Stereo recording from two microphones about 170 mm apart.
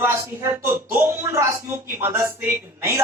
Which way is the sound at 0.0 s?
15° right (ahead or behind).